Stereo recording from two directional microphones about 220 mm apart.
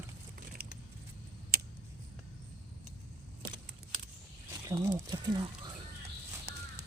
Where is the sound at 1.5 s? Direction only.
45° right (ahead or behind).